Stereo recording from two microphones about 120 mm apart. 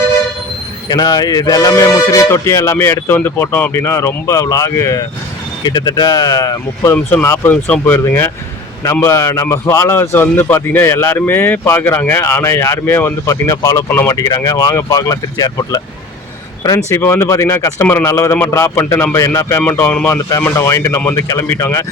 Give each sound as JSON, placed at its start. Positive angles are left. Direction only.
{"t": 0.9, "sound": "a man's voice", "side_deg": 35}
{"t": 6.9, "sound": "a man's voice", "side_deg": 15}
{"t": 13.9, "sound": "speech", "side_deg": 15}
{"t": 14.2, "sound": "a man's voice", "side_deg": 30}